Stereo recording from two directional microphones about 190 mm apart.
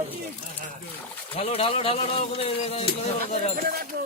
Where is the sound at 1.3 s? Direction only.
30° left (ahead or behind).